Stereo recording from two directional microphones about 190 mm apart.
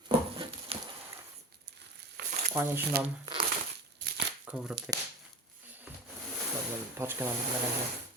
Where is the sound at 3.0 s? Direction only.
55° right (ahead or behind).